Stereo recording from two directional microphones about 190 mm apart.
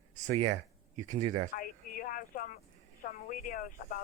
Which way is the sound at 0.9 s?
40° right (ahead or behind).